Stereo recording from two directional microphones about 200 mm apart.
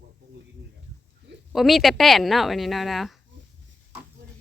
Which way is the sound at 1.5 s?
Centre (ahead or behind).